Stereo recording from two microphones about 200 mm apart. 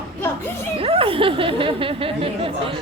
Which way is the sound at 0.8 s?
25° right (ahead or behind).